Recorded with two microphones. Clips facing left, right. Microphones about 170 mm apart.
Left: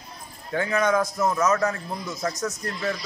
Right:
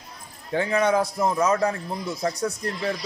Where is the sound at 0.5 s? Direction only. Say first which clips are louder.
Right 1 dB; 30° right (ahead or behind).